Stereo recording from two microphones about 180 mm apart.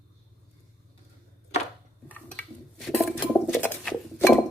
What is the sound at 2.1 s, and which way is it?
Dishes, 5° left (ahead or behind).